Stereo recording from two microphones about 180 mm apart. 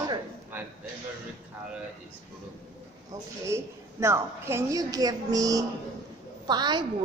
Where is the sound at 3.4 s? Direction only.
15° right (ahead or behind).